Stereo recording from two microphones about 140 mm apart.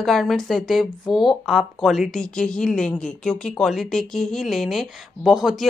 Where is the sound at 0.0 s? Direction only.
Centre (ahead or behind).